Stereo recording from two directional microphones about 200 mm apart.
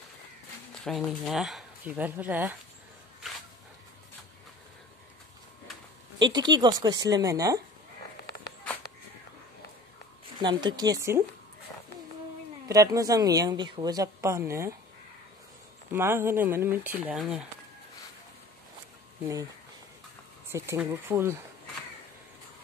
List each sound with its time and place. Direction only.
0.8 s speech: centre (ahead or behind)
6.1 s a woman's voice: 20° right (ahead or behind)
10.4 s a woman's voice: 20° right (ahead or behind)
12.6 s a woman's voice: 15° right (ahead or behind)
15.9 s a woman's voice: 10° right (ahead or behind)
20.5 s a woman's voice: 10° right (ahead or behind)